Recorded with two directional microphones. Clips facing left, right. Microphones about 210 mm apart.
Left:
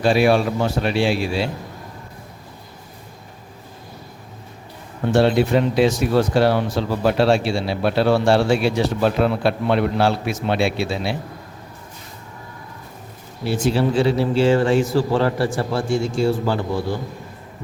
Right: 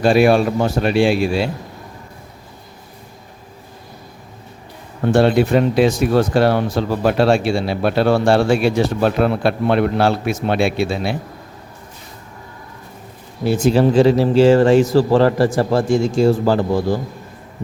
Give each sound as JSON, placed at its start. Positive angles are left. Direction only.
{"t": 0.0, "sound": "speech", "side_deg": -50}
{"t": 5.1, "sound": "speech", "side_deg": -50}
{"t": 13.4, "sound": "a man's voice", "side_deg": -45}